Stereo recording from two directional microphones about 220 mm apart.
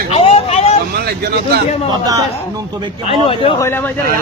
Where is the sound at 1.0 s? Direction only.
45° right (ahead or behind).